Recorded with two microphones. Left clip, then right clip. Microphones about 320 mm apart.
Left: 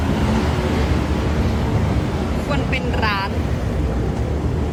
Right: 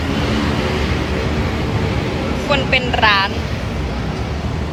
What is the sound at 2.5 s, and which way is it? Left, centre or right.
Speech, centre.